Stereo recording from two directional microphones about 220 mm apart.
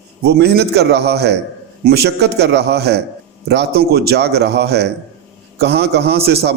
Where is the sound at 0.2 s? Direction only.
45° right (ahead or behind).